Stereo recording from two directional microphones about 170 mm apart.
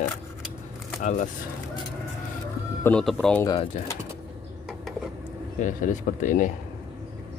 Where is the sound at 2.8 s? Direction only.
5° left (ahead or behind).